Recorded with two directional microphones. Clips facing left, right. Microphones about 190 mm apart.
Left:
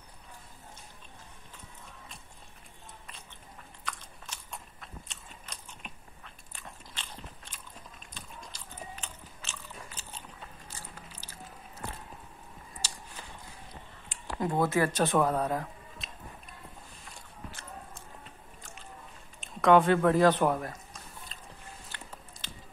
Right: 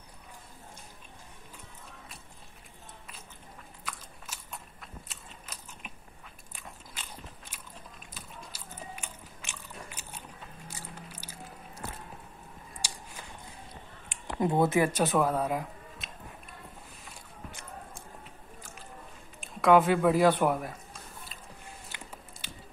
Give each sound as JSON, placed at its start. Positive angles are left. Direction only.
{"t": 3.8, "sound": "biting", "side_deg": -5}
{"t": 12.8, "sound": "a sound", "side_deg": -10}
{"t": 14.2, "sound": "speech", "side_deg": -20}
{"t": 14.9, "sound": "speech", "side_deg": -10}
{"t": 17.5, "sound": "a sound", "side_deg": -15}
{"t": 18.6, "sound": "music", "side_deg": 0}
{"t": 19.6, "sound": "speech", "side_deg": -5}
{"t": 21.9, "sound": "biting", "side_deg": -10}